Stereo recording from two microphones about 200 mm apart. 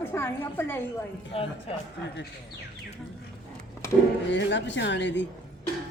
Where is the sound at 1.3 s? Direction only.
30° left (ahead or behind).